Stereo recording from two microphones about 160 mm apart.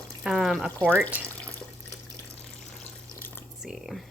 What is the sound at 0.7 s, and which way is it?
Speech, 10° left (ahead or behind).